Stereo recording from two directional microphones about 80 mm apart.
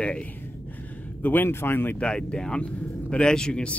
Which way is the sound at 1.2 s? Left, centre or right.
Left.